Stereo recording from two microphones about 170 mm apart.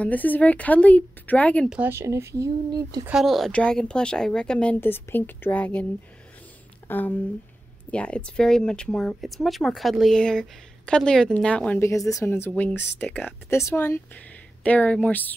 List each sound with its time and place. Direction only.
0.0 s speech: 10° left (ahead or behind)
1.7 s speech: 10° right (ahead or behind)
3.1 s speech: centre (ahead or behind)
6.9 s speech: 10° left (ahead or behind)